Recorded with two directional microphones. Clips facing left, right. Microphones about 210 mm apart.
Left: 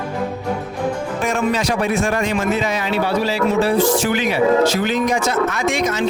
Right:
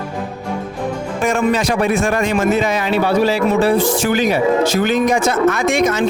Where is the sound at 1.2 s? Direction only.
50° right (ahead or behind).